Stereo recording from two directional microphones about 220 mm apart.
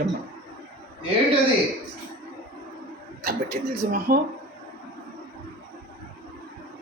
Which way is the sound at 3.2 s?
45° right (ahead or behind).